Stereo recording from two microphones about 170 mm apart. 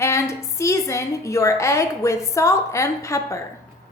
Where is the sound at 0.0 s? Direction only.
15° left (ahead or behind).